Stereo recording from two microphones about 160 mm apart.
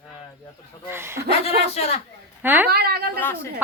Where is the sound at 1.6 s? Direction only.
40° left (ahead or behind).